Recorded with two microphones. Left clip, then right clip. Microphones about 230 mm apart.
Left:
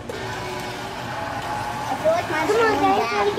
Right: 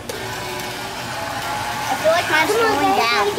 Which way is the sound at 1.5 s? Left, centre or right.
Centre.